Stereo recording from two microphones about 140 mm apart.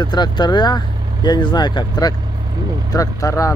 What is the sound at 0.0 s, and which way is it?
Speech, 30° left (ahead or behind).